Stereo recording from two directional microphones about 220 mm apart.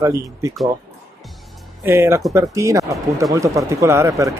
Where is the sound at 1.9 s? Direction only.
10° right (ahead or behind).